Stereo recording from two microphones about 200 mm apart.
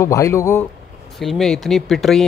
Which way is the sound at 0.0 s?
15° left (ahead or behind).